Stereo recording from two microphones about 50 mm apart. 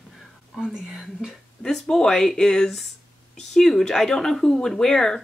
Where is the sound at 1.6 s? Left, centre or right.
Centre.